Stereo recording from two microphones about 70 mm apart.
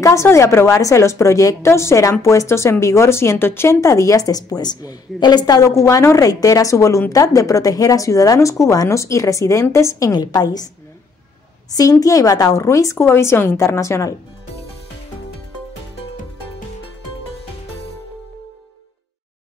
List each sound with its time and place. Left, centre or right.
0.0 s a woman's voice: left
5.6 s a woman's voice: left
11.7 s a woman's voice: left
12.5 s a woman's voice: left